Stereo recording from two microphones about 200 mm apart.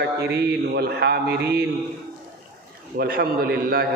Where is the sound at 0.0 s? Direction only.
50° right (ahead or behind).